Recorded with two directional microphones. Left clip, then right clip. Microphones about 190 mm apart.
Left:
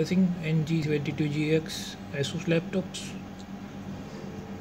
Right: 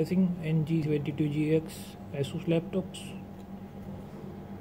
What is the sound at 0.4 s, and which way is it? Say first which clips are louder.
Speech: left 1 dB; centre (ahead or behind).